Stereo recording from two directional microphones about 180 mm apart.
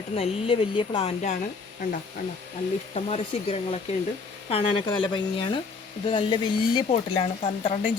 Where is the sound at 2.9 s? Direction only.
35° left (ahead or behind).